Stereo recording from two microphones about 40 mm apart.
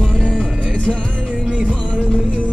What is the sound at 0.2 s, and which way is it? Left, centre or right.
Music, left.